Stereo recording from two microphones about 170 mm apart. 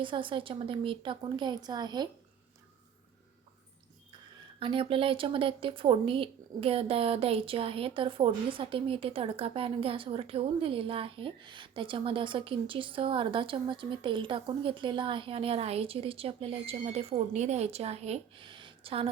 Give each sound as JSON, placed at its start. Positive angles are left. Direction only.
{"t": 0.0, "sound": "speech", "side_deg": -30}
{"t": 4.6, "sound": "speech", "side_deg": -30}